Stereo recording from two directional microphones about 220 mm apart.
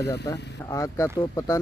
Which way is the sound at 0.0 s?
50° left (ahead or behind).